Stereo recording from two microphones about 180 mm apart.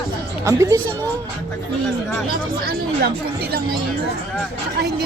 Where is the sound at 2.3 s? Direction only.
60° right (ahead or behind).